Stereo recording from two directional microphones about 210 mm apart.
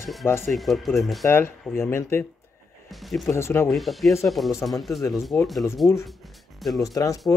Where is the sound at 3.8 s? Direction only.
Centre (ahead or behind).